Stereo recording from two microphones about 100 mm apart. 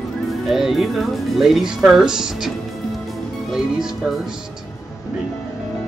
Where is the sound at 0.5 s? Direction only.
5° right (ahead or behind).